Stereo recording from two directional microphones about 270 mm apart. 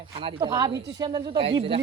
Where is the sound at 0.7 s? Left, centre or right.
Right.